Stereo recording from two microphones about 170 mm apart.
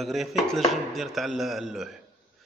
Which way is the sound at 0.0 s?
Centre (ahead or behind).